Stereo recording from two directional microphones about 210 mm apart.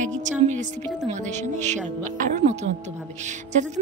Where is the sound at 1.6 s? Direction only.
35° right (ahead or behind).